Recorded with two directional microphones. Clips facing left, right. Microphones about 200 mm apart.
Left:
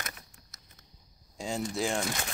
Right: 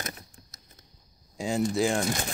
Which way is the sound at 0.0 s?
35° right (ahead or behind).